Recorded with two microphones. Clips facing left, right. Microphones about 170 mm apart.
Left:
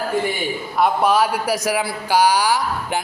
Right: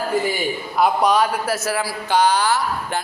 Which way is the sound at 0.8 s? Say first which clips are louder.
Even; 5° left (ahead or behind).